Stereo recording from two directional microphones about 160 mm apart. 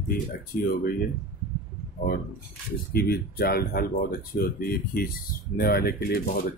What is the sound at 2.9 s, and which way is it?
Speech, 75° left (ahead or behind).